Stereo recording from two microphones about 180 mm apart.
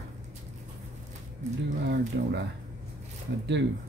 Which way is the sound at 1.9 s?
70° right (ahead or behind).